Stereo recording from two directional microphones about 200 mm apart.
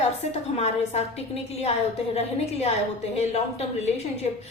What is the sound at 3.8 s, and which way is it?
Speech, 35° left (ahead or behind).